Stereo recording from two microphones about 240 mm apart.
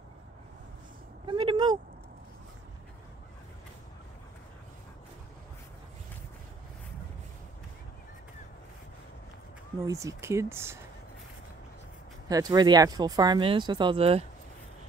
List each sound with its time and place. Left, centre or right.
1.2 s vehicle: right
9.8 s speech: centre
12.3 s speech: centre